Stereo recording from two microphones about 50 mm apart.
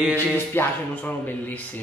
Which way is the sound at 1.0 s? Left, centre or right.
Left.